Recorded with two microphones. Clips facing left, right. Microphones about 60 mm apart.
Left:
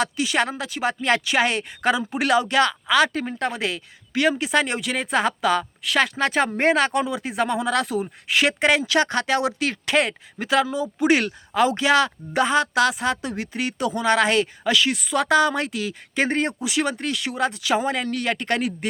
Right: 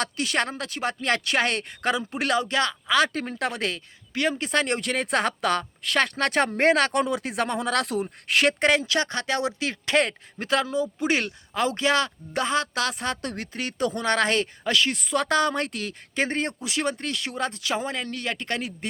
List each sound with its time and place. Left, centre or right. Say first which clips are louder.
0.0 s speech: left 4 dB; centre
3.0 s speech: left 2 dB; centre
4.2 s speech: left 4 dB; centre
8.8 s speech: left 5 dB; left